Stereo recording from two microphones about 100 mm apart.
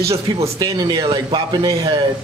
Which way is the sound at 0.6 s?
45° right (ahead or behind).